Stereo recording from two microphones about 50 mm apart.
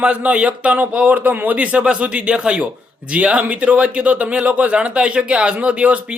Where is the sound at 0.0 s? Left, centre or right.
Right.